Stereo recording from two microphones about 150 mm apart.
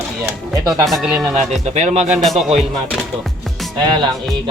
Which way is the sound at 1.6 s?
50° right (ahead or behind).